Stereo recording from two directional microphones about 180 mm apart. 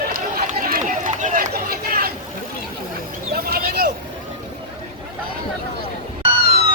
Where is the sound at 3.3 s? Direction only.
60° right (ahead or behind).